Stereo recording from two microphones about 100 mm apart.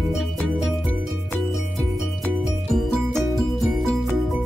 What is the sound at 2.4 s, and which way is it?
Music, centre (ahead or behind).